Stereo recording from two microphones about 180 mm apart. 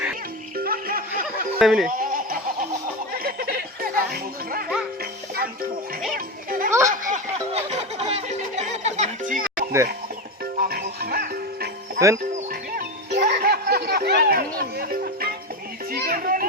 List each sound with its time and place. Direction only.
0.5 s music: 55° right (ahead or behind)
1.5 s speech: centre (ahead or behind)
1.9 s goat: 50° right (ahead or behind)
3.2 s music: 55° right (ahead or behind)
6.1 s children playing: 50° right (ahead or behind)
6.7 s speech: 15° right (ahead or behind)
6.9 s music: 45° right (ahead or behind)
10.6 s music: 55° right (ahead or behind)
11.9 s speech: 15° right (ahead or behind)
12.5 s music: 60° right (ahead or behind)
15.9 s children playing: 55° right (ahead or behind)